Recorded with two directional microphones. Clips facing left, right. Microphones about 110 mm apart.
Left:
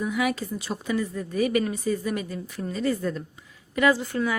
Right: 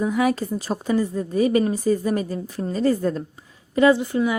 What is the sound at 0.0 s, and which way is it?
A woman's voice, 35° right (ahead or behind).